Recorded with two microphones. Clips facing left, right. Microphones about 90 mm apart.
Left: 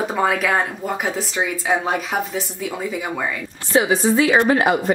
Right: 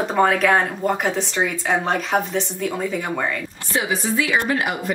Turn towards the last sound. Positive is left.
turn(degrees=30)  # may be behind; listen again after turning